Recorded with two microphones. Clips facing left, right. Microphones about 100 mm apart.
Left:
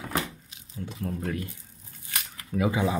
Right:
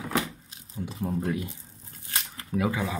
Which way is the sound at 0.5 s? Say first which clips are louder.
Right 2 dB; 30° right (ahead or behind).